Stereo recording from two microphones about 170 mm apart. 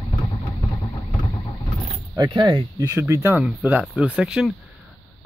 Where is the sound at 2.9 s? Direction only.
15° right (ahead or behind).